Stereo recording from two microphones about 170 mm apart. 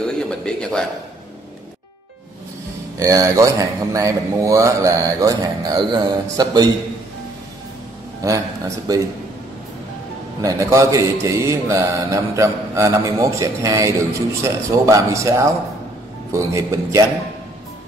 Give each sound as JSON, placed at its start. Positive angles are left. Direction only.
{"t": 0.0, "sound": "a man's voice", "side_deg": 5}
{"t": 3.0, "sound": "speech", "side_deg": -20}
{"t": 8.2, "sound": "speech", "side_deg": -20}
{"t": 10.4, "sound": "speech", "side_deg": -20}